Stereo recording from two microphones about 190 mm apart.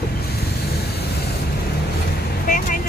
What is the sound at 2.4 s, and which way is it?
Speech, 45° left (ahead or behind).